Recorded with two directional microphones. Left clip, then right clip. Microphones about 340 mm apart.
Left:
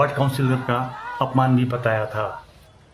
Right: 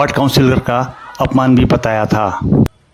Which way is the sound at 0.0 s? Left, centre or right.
Right.